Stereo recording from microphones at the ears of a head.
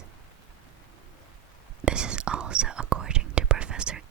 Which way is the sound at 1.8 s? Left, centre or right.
Right.